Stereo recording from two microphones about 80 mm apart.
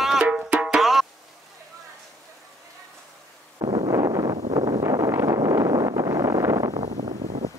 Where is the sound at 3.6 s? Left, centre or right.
Right.